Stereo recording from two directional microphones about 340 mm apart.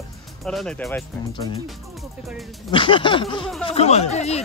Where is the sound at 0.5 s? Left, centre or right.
Centre.